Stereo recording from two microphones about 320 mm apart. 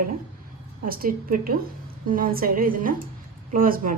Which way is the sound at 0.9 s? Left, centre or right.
Right.